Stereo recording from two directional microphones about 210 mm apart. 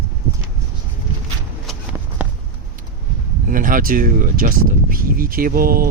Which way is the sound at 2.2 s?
5° right (ahead or behind).